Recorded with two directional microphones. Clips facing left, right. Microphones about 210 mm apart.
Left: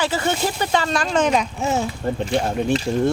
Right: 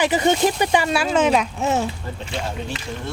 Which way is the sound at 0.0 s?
15° right (ahead or behind).